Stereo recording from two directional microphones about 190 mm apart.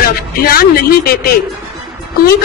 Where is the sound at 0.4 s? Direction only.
50° left (ahead or behind).